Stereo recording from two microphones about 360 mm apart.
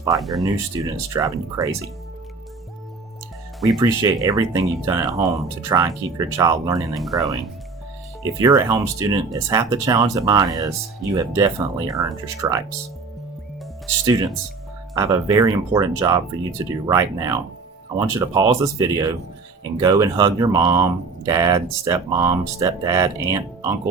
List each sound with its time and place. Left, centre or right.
0.0 s speech: centre
3.8 s speech: centre
8.2 s speech: centre
14.0 s speech: centre